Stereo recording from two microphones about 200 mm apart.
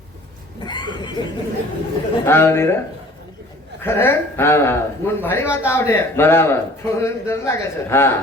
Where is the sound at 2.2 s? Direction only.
10° left (ahead or behind).